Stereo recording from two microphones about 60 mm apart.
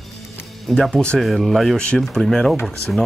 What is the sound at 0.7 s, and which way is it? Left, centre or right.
Speech, centre.